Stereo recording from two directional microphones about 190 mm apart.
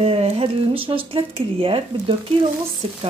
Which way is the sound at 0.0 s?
30° right (ahead or behind).